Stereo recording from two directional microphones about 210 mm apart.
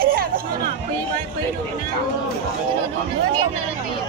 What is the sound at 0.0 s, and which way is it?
Hubbub, 45° right (ahead or behind).